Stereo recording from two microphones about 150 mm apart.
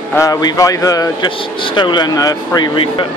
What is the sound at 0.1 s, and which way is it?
Speech, 20° left (ahead or behind).